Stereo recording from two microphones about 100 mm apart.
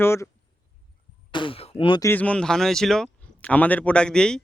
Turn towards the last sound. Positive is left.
turn(degrees=5)  # may be behind; listen again after turning